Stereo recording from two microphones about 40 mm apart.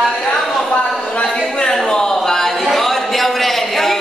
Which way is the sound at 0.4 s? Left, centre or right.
Centre.